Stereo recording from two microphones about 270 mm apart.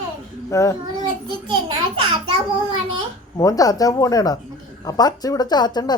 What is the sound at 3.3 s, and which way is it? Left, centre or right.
A woman's voice, centre.